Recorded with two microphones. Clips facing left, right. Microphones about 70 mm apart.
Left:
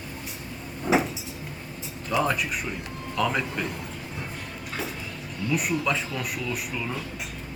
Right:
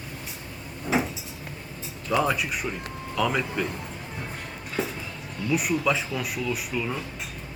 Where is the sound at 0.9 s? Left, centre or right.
Left.